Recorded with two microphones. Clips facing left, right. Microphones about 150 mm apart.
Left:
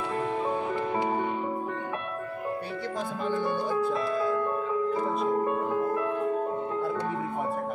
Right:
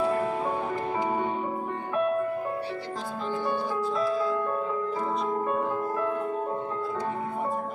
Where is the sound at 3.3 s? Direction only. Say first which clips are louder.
Left 1 dB; 55° left (ahead or behind).